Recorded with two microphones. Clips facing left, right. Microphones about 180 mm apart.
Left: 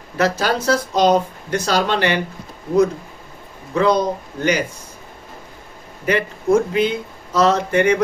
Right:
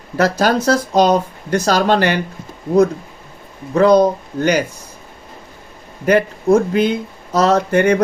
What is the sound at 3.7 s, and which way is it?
Speech, 45° right (ahead or behind).